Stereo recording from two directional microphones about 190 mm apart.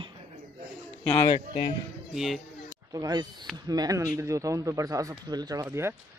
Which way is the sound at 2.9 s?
20° right (ahead or behind).